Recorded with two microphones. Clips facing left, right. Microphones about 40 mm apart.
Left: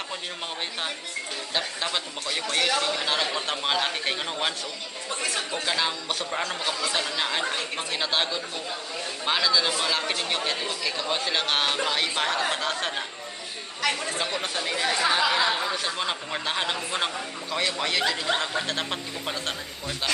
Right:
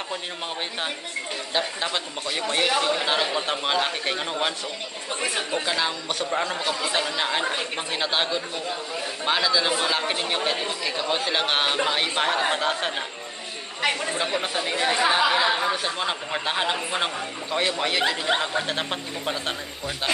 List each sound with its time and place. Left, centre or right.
1.5 s a man's voice: centre
5.2 s speech: centre
5.7 s speech: centre
6.8 s a man's voice: centre
13.7 s a man's voice: right; by 19.5 s centre